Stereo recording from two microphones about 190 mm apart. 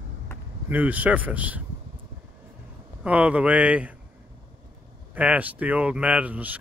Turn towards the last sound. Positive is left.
turn(degrees=-10)  # may be behind; listen again after turning